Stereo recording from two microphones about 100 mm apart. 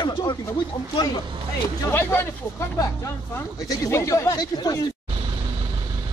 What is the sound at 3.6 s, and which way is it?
Speech, 35° left (ahead or behind).